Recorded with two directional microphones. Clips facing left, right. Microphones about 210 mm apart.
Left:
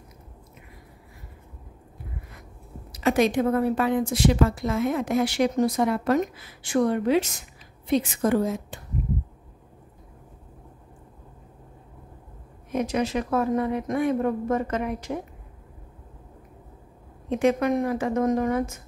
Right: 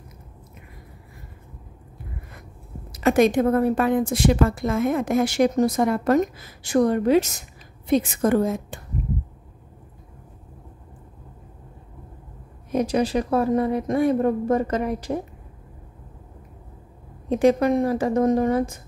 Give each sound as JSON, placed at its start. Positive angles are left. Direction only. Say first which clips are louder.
{"t": 2.9, "sound": "a woman's voice", "louder": "right 4 dB", "side_deg": -50}
{"t": 12.7, "sound": "speech", "louder": "right 4 dB", "side_deg": -35}
{"t": 17.3, "sound": "speech", "louder": "right 4 dB", "side_deg": -35}